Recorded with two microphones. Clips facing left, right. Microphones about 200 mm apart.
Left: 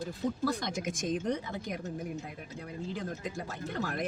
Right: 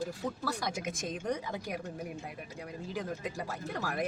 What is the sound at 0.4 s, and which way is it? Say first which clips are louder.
Speech: left 2 dB; 10° right (ahead or behind).